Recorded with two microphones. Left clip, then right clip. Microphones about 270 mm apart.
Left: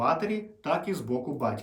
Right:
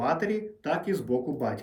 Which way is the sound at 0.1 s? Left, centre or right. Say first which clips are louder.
Even; centre.